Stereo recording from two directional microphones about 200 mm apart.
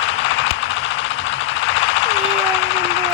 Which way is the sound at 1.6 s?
70° left (ahead or behind).